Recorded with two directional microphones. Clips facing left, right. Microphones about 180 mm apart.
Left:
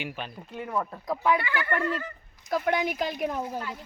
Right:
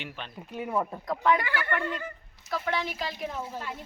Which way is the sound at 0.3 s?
10° right (ahead or behind).